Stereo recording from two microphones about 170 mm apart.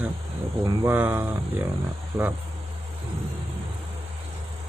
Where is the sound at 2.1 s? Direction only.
25° right (ahead or behind).